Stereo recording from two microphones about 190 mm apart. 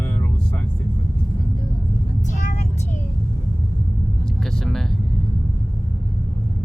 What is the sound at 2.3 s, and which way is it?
Vehicle, 40° left (ahead or behind).